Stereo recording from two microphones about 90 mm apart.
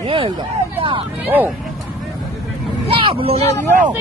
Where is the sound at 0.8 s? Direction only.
75° right (ahead or behind).